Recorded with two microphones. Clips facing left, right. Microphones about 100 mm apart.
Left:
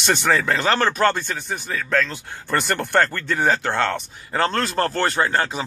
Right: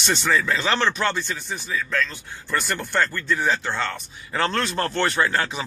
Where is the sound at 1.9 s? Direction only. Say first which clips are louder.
Left 6 dB; 90° left.